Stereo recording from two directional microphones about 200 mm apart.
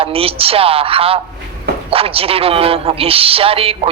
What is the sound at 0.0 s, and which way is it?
A man's voice, 30° right (ahead or behind).